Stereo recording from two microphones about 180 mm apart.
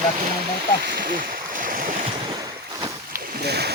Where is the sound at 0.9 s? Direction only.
55° right (ahead or behind).